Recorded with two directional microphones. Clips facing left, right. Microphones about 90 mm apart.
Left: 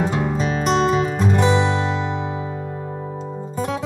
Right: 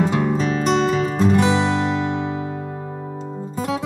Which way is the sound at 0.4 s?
10° left (ahead or behind).